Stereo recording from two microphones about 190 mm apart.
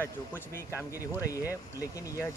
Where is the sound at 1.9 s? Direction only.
15° left (ahead or behind).